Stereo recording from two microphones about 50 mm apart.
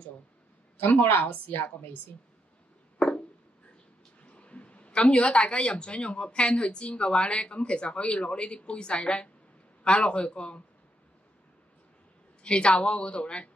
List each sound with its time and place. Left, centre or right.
0.7 s a woman's voice: left
3.0 s a sound: centre
4.2 s speech: left
12.4 s speech: left